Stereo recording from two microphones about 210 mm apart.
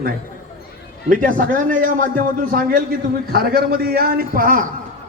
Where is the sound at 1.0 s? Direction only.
40° right (ahead or behind).